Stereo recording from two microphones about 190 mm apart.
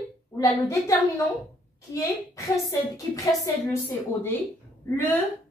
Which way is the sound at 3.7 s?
10° left (ahead or behind).